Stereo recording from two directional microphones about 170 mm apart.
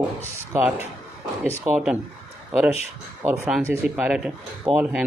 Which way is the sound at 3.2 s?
10° right (ahead or behind).